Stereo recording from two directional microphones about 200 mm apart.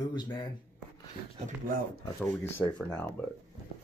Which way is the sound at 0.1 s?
20° left (ahead or behind).